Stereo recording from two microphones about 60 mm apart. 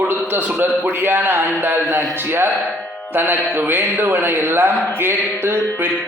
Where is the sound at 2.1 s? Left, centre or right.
Right.